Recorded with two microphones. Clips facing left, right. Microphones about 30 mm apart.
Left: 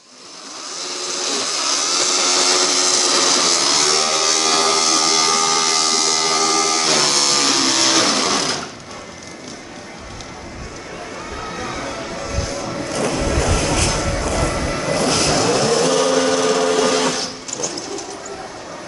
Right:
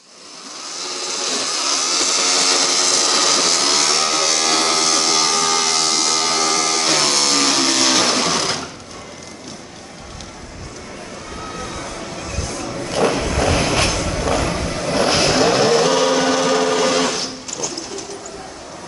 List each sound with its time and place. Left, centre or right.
0.8 s vehicle: centre
11.3 s a sound: centre
12.9 s vehicle: right
13.9 s a sound: centre
14.2 s music: centre
14.5 s vehicle: centre
15.0 s vehicle: right; by 18.0 s centre